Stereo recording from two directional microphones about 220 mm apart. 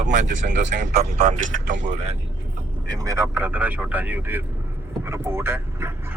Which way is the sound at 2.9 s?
15° right (ahead or behind).